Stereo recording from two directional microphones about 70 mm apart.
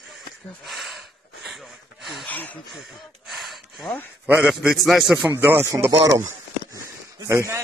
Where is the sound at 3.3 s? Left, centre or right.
Centre.